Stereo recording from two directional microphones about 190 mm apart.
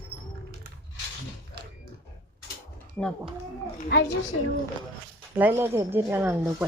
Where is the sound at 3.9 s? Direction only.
70° left (ahead or behind).